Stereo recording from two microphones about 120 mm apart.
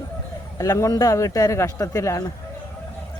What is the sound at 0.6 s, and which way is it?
Speech, 30° left (ahead or behind).